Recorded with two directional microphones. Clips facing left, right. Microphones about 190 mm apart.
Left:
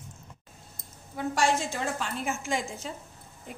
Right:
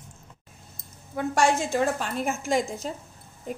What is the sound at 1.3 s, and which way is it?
A woman's voice, 50° right (ahead or behind).